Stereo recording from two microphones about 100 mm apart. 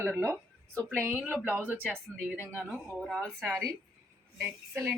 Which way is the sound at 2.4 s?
20° left (ahead or behind).